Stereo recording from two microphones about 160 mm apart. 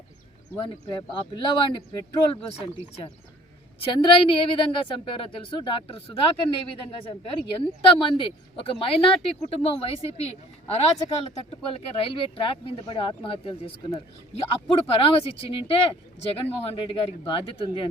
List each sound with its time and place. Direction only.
0.6 s a woman's voice: 30° left (ahead or behind)